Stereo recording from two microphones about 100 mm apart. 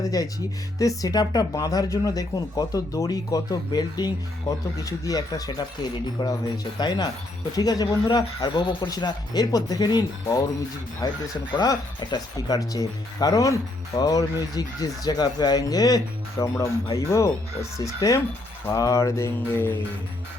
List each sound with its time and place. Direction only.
0.0 s speech: 40° left (ahead or behind)
18.7 s mantra: 35° left (ahead or behind)